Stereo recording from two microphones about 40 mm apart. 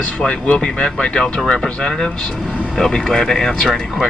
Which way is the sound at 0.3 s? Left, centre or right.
Left.